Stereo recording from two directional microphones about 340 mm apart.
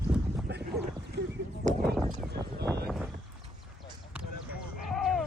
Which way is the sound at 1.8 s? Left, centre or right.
Centre.